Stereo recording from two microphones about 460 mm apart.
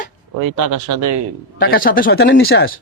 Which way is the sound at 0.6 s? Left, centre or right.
Right.